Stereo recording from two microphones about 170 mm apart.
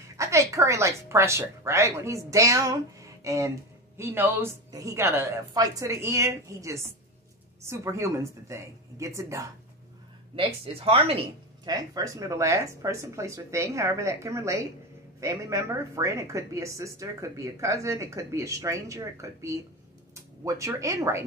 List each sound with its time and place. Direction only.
0.2 s speech: 15° right (ahead or behind)
10.3 s speech: 35° right (ahead or behind)
11.7 s speech: 20° right (ahead or behind)